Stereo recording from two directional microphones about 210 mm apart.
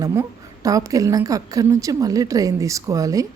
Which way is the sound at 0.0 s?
15° right (ahead or behind).